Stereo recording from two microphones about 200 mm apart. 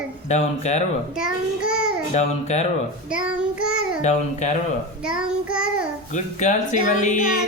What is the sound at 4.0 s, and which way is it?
Speech, 35° left (ahead or behind).